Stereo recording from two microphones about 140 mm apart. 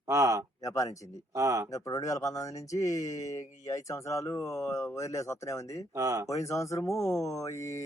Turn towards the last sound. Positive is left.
turn(degrees=20)  # may be behind; listen again after turning